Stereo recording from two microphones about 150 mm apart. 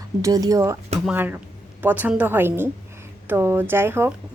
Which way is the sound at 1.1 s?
10° right (ahead or behind).